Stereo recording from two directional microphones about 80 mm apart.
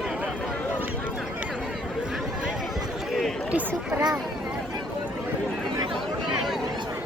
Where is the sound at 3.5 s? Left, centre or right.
Centre.